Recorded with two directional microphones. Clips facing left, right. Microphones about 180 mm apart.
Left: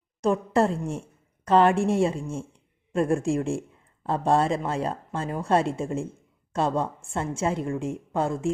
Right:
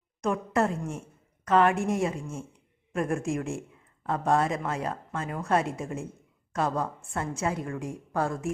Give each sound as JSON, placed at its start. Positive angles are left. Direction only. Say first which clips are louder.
{"t": 0.2, "sound": "a woman's voice", "louder": "left 4 dB", "side_deg": 30}